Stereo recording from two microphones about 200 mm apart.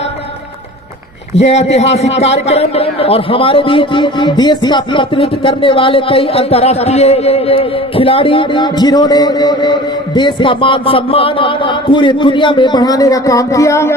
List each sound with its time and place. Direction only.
1.4 s a man's voice: 35° left (ahead or behind); by 13.9 s 15° left (ahead or behind)